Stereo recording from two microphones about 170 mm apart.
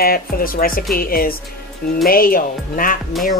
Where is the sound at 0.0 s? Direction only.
60° left (ahead or behind).